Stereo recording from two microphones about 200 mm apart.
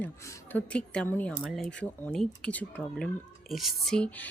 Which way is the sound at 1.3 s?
5° right (ahead or behind).